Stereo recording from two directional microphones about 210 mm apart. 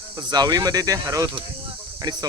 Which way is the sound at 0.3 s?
20° right (ahead or behind).